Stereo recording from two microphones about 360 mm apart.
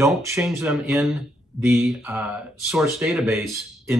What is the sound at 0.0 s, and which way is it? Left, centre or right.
Speech, centre.